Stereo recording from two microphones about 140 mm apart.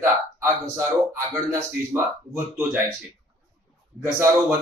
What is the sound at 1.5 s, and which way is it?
Speech, 20° right (ahead or behind).